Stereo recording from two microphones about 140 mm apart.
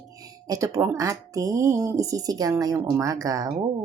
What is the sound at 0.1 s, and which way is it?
Speech, 25° right (ahead or behind).